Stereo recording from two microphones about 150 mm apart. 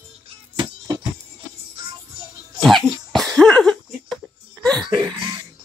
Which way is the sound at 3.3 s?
5° left (ahead or behind).